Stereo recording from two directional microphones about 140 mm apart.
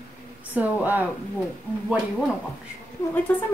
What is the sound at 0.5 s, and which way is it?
Speech, 10° right (ahead or behind).